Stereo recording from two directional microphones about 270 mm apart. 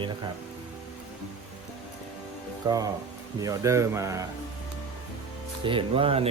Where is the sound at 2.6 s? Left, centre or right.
Centre.